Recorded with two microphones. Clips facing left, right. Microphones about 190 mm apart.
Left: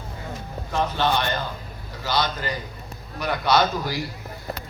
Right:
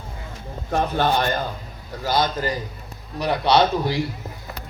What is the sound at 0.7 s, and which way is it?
Speech, 50° right (ahead or behind).